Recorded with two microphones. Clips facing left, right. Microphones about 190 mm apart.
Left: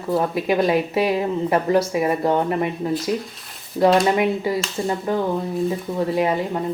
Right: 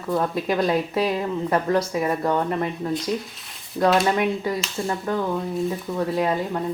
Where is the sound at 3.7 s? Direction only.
25° left (ahead or behind).